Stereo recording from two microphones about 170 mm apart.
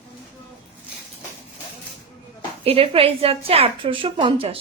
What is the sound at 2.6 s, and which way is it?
A woman's voice, 35° right (ahead or behind).